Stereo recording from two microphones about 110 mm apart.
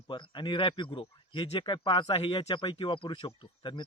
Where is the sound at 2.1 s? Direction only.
60° left (ahead or behind).